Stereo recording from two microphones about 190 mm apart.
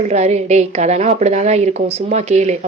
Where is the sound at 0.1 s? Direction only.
35° right (ahead or behind).